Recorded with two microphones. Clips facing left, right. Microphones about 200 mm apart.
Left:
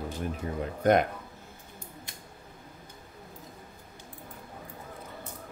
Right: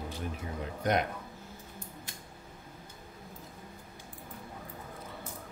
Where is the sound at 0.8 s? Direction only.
50° left (ahead or behind).